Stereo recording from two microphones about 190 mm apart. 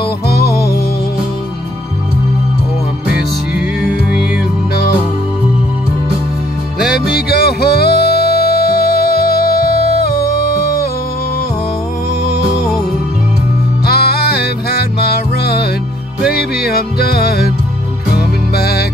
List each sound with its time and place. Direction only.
0.3 s music: 55° left (ahead or behind)
7.1 s music: 55° left (ahead or behind)
13.8 s music: 55° left (ahead or behind)
16.6 s music: 50° left (ahead or behind)